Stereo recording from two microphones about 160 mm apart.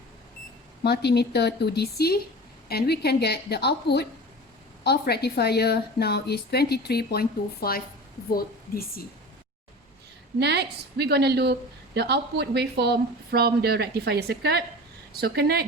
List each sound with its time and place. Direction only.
0.9 s a woman's voice: 90° left; by 9.0 s 65° left (ahead or behind)
10.4 s speech: 90° right
15.1 s speech: 75° right (ahead or behind)